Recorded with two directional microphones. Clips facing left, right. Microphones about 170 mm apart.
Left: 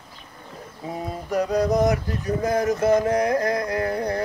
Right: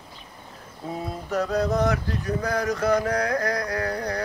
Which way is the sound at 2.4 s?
20° left (ahead or behind).